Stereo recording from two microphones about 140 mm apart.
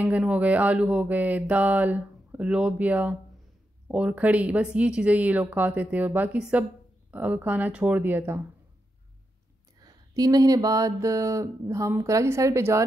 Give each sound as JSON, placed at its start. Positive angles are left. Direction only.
{"t": 0.0, "sound": "mantra", "side_deg": -10}
{"t": 9.8, "sound": "mantra", "side_deg": -25}